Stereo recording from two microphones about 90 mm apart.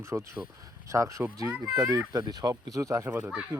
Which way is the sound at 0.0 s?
30° right (ahead or behind).